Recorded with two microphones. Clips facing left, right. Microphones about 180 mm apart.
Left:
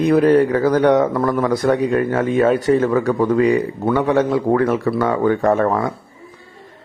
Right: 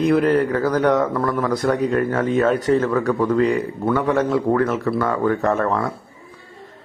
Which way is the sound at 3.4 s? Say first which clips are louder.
Left 5 dB; 15° left (ahead or behind).